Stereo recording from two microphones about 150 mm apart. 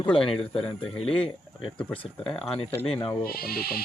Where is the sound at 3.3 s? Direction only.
90° left.